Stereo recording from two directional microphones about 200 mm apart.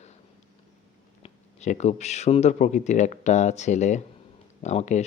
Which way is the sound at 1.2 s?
35° left (ahead or behind).